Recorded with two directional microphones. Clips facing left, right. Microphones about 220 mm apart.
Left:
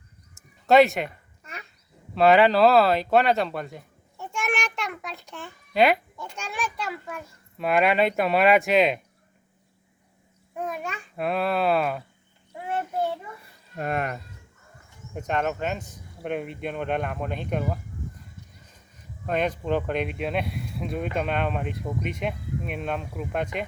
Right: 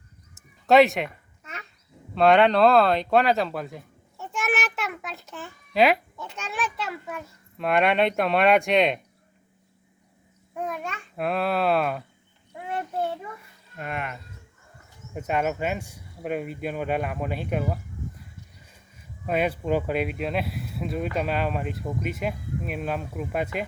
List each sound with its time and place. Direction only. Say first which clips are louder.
0.7 s a sound: even; centre (ahead or behind)
2.1 s speech: even; centre (ahead or behind)
10.5 s speech: even; 5° left (ahead or behind)
13.7 s speech: left 5 dB; 40° left (ahead or behind)
15.1 s speech: right 1 dB; 5° right (ahead or behind)